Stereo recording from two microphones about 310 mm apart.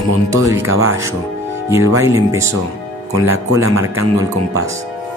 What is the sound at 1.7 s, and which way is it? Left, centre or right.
Speech, centre.